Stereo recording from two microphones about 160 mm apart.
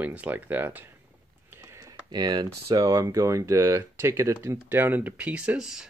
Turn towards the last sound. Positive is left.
turn(degrees=-5)  # may be behind; listen again after turning